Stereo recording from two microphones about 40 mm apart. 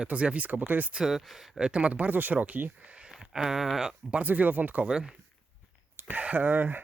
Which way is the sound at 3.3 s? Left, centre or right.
Centre.